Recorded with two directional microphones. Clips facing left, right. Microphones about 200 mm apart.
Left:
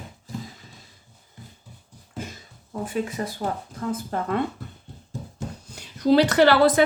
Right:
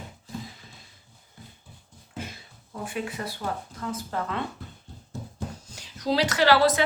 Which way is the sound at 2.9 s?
45° left (ahead or behind).